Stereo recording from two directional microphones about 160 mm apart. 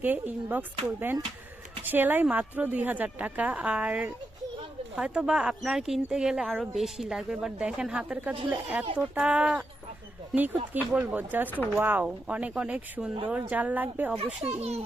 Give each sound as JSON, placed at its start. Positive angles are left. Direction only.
{"t": 0.0, "sound": "a woman's voice", "side_deg": -10}
{"t": 10.8, "sound": "a woman's voice", "side_deg": -10}
{"t": 14.2, "sound": "a child's voice", "side_deg": -40}